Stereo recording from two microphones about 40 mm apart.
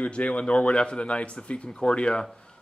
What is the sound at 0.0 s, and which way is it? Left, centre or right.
Speech, left.